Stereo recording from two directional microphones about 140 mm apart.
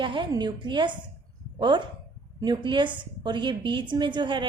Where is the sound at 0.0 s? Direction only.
35° right (ahead or behind).